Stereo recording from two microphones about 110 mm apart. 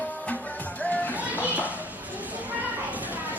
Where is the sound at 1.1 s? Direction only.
15° right (ahead or behind).